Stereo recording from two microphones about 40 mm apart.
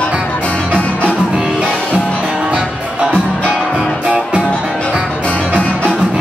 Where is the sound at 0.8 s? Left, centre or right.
Left.